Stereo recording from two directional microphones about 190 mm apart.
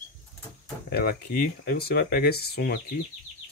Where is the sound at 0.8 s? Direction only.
55° left (ahead or behind).